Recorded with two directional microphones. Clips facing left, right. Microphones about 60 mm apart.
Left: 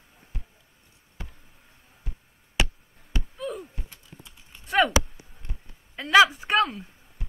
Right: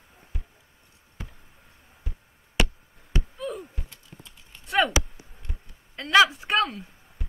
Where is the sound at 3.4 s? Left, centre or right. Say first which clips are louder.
Even; centre.